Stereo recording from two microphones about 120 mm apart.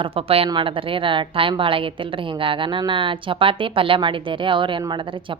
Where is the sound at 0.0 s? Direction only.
50° right (ahead or behind).